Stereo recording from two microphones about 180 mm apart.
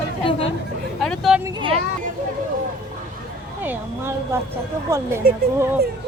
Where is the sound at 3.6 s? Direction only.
10° right (ahead or behind).